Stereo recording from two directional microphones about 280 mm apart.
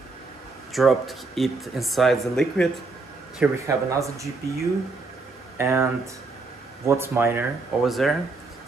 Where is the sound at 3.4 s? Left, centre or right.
Centre.